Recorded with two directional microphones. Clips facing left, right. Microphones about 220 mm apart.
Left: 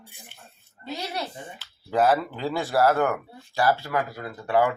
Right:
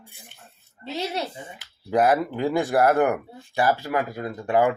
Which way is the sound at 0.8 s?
25° right (ahead or behind).